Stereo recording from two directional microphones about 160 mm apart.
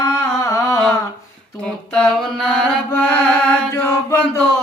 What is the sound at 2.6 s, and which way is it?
Mantra, 10° left (ahead or behind).